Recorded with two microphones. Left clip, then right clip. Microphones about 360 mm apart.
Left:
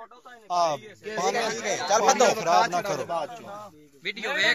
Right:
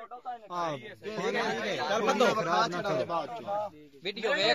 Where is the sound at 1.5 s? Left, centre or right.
Left.